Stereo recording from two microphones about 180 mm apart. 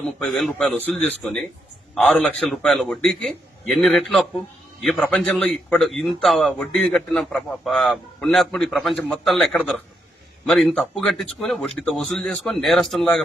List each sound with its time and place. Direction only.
0.2 s a man's voice: centre (ahead or behind)